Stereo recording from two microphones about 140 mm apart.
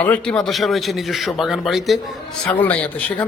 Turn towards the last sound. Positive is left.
turn(degrees=10)  # may be behind; listen again after turning